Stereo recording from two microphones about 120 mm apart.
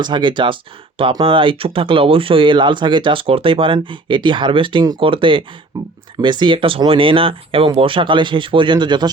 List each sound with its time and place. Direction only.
0.0 s speech: 40° right (ahead or behind)
5.7 s speech: 30° right (ahead or behind)
6.2 s speech: 40° right (ahead or behind)